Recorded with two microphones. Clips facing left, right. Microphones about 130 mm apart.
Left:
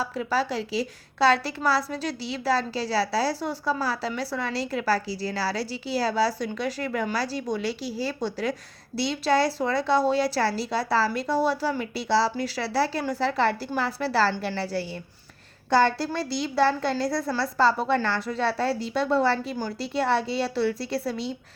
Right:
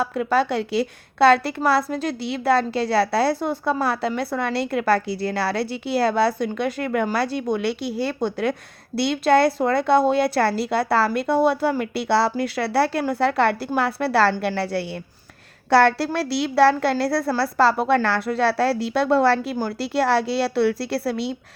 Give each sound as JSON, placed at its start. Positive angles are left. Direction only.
{"t": 0.0, "sound": "a woman's voice", "side_deg": -55}